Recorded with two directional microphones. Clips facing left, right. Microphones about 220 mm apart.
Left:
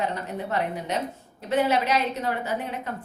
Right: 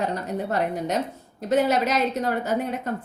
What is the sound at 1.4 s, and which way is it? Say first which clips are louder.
A woman's voice: right 2 dB; 40° right (ahead or behind).